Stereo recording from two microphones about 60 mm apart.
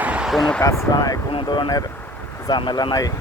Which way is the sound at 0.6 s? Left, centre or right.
Left.